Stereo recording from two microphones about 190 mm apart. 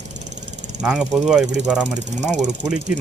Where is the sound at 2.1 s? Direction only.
40° right (ahead or behind).